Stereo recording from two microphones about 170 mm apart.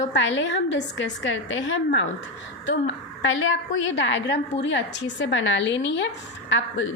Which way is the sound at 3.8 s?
90° left.